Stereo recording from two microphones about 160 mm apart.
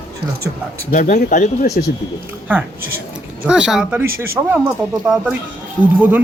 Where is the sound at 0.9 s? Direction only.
55° left (ahead or behind).